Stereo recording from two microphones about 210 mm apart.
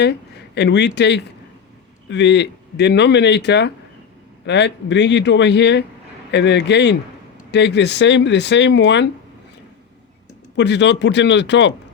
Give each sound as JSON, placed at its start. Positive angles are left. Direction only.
{"t": 0.0, "sound": "speech", "side_deg": 55}
{"t": 10.6, "sound": "speech", "side_deg": 55}